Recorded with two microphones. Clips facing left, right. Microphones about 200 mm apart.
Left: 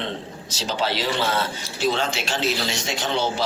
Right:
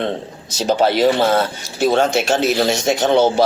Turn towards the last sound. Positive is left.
turn(degrees=-50)  # may be behind; listen again after turning